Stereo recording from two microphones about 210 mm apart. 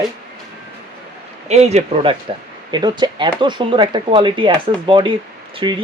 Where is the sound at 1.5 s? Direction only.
30° right (ahead or behind).